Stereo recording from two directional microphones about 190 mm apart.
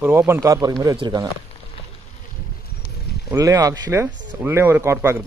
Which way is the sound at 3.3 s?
15° right (ahead or behind).